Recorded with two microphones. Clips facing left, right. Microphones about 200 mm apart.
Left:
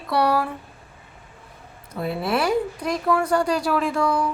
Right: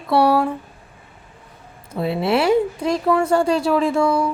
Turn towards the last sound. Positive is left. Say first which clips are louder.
# right 4 dB
turn(degrees=-25)  # may be behind; listen again after turning